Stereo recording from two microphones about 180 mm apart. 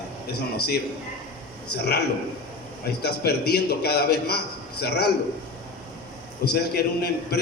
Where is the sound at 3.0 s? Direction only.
65° left (ahead or behind).